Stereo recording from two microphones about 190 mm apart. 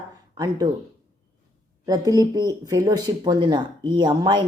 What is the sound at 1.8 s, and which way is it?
Speech, 20° right (ahead or behind).